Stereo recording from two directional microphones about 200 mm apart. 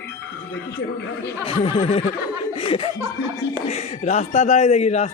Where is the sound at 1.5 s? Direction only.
25° left (ahead or behind).